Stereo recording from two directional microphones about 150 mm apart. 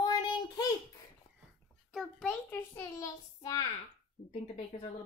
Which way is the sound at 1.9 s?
Centre (ahead or behind).